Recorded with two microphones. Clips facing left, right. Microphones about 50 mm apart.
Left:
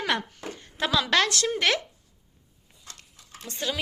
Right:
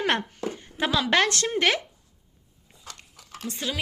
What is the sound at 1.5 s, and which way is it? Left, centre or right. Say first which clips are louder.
Speech: right 2 dB; right.